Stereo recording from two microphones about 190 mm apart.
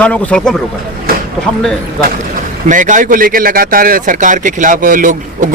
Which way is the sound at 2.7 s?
40° right (ahead or behind).